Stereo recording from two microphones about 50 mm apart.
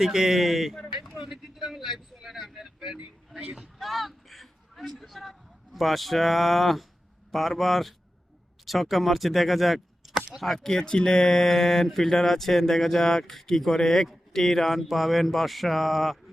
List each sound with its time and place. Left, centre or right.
0.0 s speech: centre
3.8 s speech: centre